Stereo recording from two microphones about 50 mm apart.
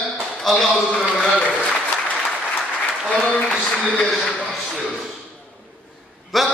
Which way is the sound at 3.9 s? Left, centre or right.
Centre.